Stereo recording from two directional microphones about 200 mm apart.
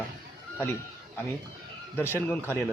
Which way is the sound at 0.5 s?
10° left (ahead or behind).